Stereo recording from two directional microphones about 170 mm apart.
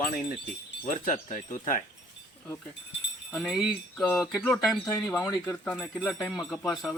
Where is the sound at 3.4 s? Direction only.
Centre (ahead or behind).